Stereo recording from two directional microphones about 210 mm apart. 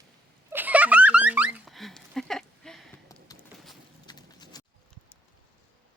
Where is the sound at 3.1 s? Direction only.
15° left (ahead or behind).